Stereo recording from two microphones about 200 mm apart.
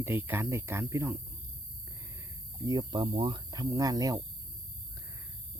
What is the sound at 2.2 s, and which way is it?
Speech, 20° right (ahead or behind).